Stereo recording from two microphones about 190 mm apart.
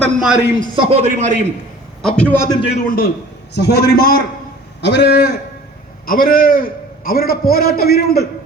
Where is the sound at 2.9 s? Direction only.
50° left (ahead or behind).